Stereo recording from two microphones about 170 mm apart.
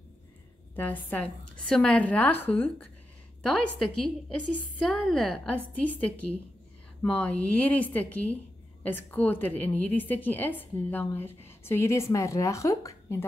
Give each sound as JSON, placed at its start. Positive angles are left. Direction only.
{"t": 0.7, "sound": "a woman's voice", "side_deg": 10}